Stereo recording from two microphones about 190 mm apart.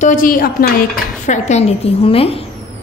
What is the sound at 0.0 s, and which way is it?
Speech, 45° left (ahead or behind).